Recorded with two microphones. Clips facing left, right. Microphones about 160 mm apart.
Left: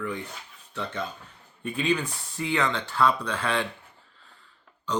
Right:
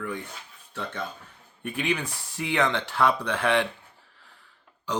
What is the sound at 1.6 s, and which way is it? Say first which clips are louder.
Speech: left 2 dB; 75° right (ahead or behind).